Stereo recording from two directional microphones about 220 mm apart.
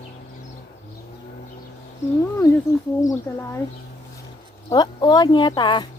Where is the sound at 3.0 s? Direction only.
10° left (ahead or behind).